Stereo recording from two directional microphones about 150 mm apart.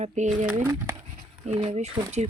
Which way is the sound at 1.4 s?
45° right (ahead or behind).